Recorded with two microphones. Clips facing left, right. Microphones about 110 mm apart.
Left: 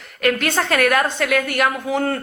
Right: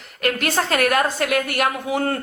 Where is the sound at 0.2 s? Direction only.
40° right (ahead or behind).